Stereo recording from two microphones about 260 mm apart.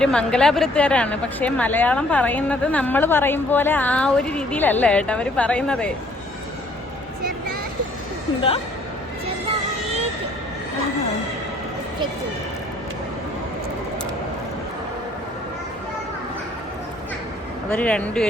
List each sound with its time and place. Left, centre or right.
0.0 s speech: centre
8.4 s speech: left
17.7 s speech: centre